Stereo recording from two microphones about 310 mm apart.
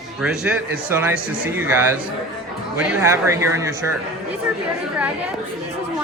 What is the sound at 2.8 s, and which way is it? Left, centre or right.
Speech, centre.